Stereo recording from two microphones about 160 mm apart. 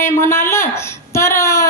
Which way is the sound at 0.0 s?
15° left (ahead or behind).